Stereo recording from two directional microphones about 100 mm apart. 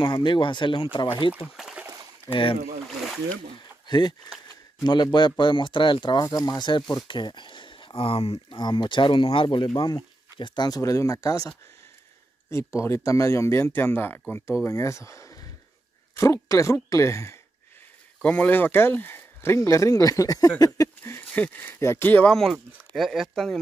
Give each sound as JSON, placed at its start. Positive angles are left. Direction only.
{"t": 0.0, "sound": "speech", "side_deg": 50}
{"t": 1.6, "sound": "a sound", "side_deg": -5}
{"t": 2.3, "sound": "speech", "side_deg": 60}
{"t": 3.8, "sound": "speech", "side_deg": 45}
{"t": 6.2, "sound": "speech", "side_deg": 35}
{"t": 10.8, "sound": "speech", "side_deg": 35}
{"t": 18.2, "sound": "speech", "side_deg": 15}
{"t": 22.3, "sound": "speech", "side_deg": 0}